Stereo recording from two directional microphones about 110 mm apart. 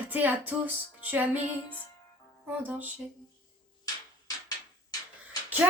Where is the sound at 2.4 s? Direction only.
15° right (ahead or behind).